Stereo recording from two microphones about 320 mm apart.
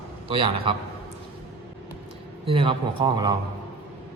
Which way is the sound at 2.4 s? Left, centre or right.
Centre.